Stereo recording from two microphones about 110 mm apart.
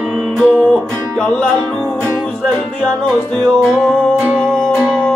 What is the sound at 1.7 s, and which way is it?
Music, 20° right (ahead or behind).